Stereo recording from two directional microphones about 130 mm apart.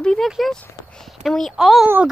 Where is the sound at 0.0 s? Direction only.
5° left (ahead or behind).